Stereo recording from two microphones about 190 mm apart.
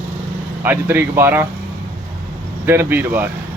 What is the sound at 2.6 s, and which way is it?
Speech, 10° right (ahead or behind).